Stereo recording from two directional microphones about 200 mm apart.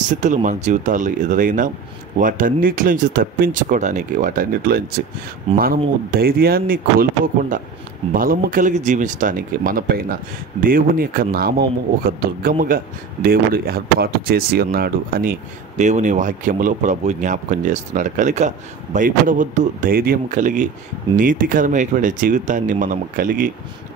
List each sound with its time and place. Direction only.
0.2 s speech: 40° right (ahead or behind)
15.8 s speech: 35° right (ahead or behind)